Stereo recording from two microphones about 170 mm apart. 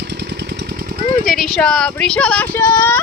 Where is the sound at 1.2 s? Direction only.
Centre (ahead or behind).